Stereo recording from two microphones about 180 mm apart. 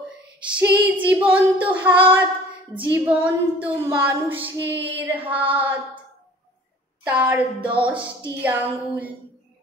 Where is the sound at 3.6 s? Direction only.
10° right (ahead or behind).